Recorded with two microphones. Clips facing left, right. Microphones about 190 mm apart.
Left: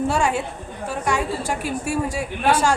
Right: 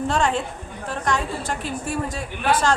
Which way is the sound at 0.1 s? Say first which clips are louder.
Left 1 dB; 10° left (ahead or behind).